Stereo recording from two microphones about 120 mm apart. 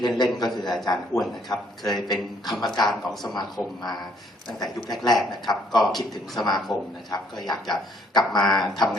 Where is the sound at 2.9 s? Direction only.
Centre (ahead or behind).